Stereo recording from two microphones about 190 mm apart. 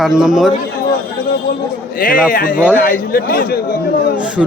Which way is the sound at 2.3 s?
45° left (ahead or behind).